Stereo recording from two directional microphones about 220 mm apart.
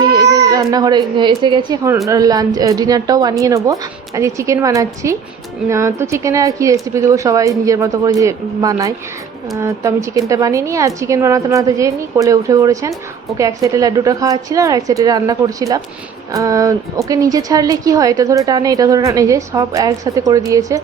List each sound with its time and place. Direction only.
0.0 s a woman's voice: 15° right (ahead or behind)